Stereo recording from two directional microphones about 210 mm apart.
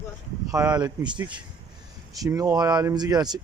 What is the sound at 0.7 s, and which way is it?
Speech, 20° right (ahead or behind).